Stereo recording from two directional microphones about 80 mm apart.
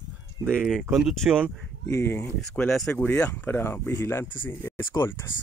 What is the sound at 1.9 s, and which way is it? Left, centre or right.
Speech, left.